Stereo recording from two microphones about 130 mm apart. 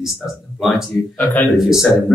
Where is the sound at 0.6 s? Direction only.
5° right (ahead or behind).